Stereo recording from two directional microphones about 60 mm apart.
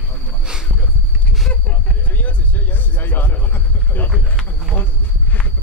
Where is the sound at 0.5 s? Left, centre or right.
Centre.